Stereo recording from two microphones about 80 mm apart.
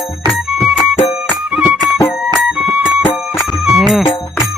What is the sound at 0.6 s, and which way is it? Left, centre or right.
Music, centre.